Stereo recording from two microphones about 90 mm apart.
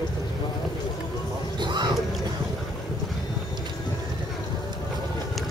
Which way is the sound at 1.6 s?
55° right (ahead or behind).